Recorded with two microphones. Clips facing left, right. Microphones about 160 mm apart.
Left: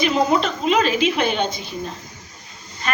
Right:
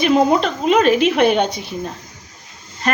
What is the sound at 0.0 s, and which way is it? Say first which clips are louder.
A woman's voice: right 4 dB; 55° right (ahead or behind).